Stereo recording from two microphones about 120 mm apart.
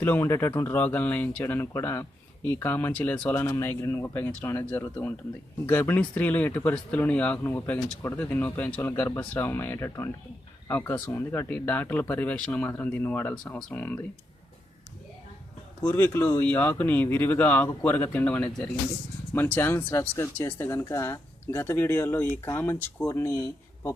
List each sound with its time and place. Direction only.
0.0 s speech: 20° left (ahead or behind)
15.8 s speech: 15° left (ahead or behind)